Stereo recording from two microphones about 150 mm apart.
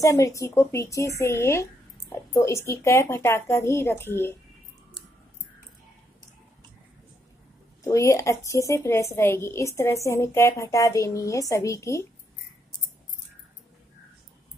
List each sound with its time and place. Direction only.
0.0 s a woman's voice: 20° left (ahead or behind)
7.8 s a woman's voice: 20° left (ahead or behind)